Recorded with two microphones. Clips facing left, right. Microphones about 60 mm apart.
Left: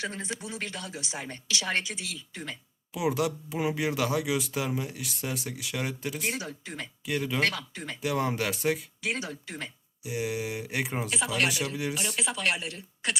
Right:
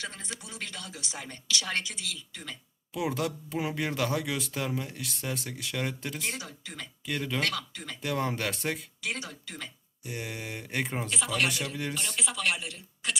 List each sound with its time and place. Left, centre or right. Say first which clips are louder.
0.0 s speech: left 5 dB; left
2.9 s speech: left 3 dB; centre
7.4 s speech: left 3 dB; left
8.0 s speech: left 2 dB; centre
9.0 s speech: left 3 dB; left
10.0 s speech: left 6 dB; centre
12.2 s speech: left 1 dB; left